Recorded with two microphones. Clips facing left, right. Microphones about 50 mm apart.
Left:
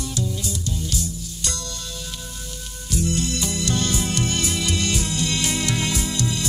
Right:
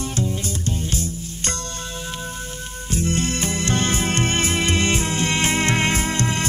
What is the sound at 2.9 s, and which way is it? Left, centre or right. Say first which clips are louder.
Music: right 1 dB; right.